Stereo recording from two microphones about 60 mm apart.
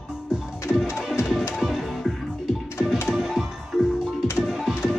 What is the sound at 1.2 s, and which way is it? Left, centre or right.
Music, left.